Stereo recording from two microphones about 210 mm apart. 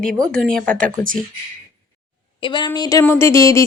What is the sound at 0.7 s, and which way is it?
Speech, 40° right (ahead or behind).